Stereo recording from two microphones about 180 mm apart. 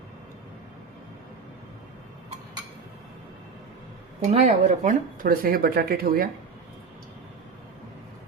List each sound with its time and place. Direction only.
4.3 s speech: 35° right (ahead or behind); by 6.2 s 55° right (ahead or behind)